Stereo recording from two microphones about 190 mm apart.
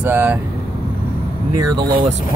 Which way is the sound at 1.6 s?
20° right (ahead or behind).